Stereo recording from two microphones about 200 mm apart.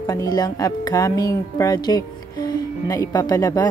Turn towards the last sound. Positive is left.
turn(degrees=20)  # may be behind; listen again after turning